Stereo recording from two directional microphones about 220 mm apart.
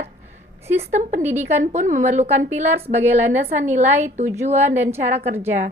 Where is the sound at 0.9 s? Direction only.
35° right (ahead or behind).